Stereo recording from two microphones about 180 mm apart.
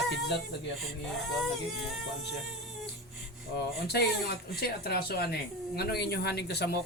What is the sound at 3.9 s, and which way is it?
Speech, 65° left (ahead or behind).